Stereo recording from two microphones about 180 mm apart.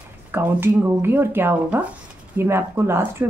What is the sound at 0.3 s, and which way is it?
A woman's voice, 10° right (ahead or behind).